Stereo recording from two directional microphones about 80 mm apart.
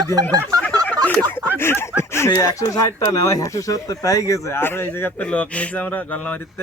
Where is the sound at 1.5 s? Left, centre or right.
Left.